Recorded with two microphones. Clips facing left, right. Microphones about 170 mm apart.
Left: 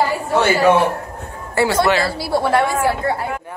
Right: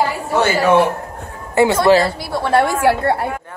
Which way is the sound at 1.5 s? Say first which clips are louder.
Right 4 dB; 20° right (ahead or behind).